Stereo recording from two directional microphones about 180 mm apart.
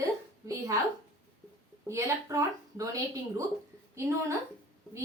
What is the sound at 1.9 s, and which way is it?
A woman's voice, 15° right (ahead or behind).